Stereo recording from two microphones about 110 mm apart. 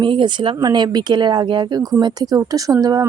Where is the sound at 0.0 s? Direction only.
50° right (ahead or behind).